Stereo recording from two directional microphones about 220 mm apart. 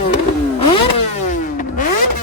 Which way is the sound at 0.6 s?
25° left (ahead or behind).